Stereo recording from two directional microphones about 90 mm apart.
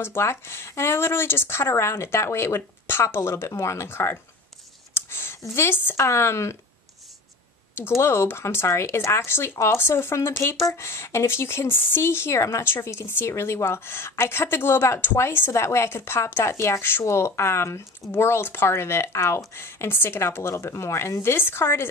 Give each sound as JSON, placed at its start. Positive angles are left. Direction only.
{"t": 0.0, "sound": "speech", "side_deg": 25}
{"t": 4.9, "sound": "a sound", "side_deg": 25}
{"t": 5.5, "sound": "speech", "side_deg": 25}
{"t": 8.0, "sound": "speech", "side_deg": 30}